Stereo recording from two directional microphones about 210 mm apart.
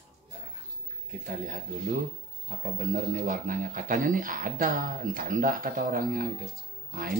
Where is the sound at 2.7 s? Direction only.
35° right (ahead or behind).